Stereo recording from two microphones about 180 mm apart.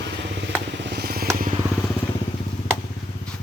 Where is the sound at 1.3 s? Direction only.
50° right (ahead or behind).